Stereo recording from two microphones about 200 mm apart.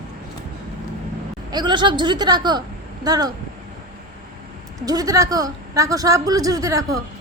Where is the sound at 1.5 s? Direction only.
20° right (ahead or behind).